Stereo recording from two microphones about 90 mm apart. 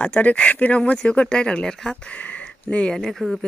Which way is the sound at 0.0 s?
15° left (ahead or behind).